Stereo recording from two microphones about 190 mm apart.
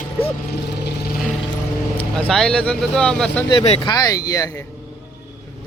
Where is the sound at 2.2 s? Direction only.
Centre (ahead or behind).